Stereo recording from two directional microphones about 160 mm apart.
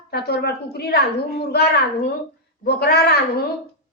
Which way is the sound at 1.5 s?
90° left.